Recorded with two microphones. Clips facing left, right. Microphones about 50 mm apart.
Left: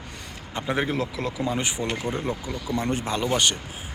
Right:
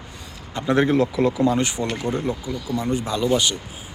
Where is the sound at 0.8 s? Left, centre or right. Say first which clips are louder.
Right 9 dB; centre.